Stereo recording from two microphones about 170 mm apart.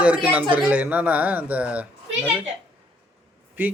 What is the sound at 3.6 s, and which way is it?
Speech, 10° right (ahead or behind).